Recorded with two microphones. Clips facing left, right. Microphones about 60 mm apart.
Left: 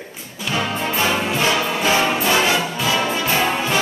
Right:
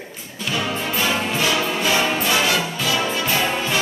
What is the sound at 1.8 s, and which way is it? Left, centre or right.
Music, left.